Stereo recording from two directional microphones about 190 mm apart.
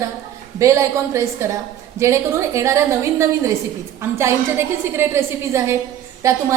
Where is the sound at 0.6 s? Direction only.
15° right (ahead or behind).